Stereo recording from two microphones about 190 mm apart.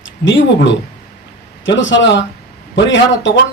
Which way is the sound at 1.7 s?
75° left (ahead or behind).